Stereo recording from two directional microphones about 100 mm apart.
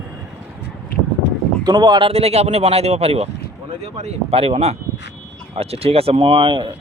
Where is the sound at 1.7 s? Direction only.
45° right (ahead or behind).